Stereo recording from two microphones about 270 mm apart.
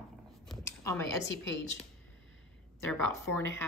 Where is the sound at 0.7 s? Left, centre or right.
Centre.